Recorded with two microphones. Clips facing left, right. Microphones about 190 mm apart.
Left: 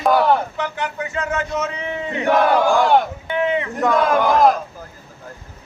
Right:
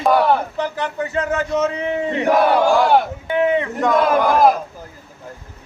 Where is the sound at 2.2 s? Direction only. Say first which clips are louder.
Even; 5° right (ahead or behind).